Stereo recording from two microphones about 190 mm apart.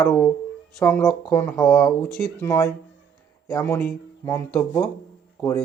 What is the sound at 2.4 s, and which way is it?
Speech, 15° left (ahead or behind).